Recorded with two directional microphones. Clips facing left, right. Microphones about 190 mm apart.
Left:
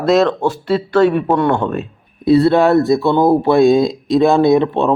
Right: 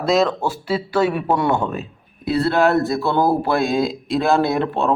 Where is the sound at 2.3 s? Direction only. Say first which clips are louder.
Left 6 dB; 20° left (ahead or behind).